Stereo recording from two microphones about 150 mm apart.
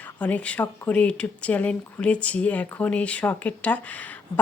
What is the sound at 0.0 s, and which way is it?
Speech, 10° left (ahead or behind).